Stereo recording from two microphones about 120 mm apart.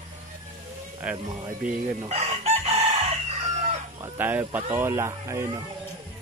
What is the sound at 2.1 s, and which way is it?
Chicken, 60° right (ahead or behind).